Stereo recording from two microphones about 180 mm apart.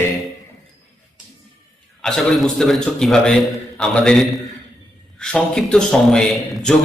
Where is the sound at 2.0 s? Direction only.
Centre (ahead or behind).